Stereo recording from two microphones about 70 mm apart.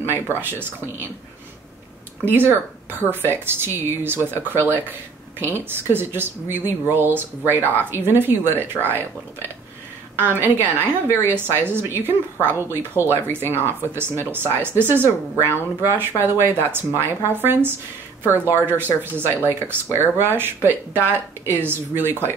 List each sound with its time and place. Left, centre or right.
0.4 s a woman's voice: right
2.2 s a woman's voice: right
10.1 s a woman's voice: right